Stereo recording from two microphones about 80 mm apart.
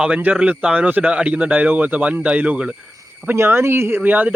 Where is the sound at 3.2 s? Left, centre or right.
Right.